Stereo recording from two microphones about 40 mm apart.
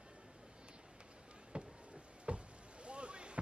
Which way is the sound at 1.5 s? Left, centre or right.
Right.